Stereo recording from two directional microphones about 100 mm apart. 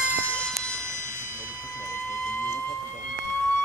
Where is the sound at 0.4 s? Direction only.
10° left (ahead or behind).